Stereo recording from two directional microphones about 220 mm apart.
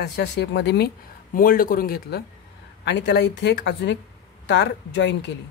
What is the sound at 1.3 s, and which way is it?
A man's voice, 40° left (ahead or behind).